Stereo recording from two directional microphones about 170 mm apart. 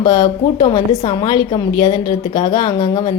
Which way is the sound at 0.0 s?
25° left (ahead or behind).